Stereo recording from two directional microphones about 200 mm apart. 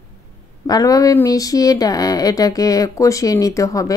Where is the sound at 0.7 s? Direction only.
20° left (ahead or behind).